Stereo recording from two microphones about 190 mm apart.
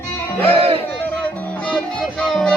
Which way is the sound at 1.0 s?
5° left (ahead or behind).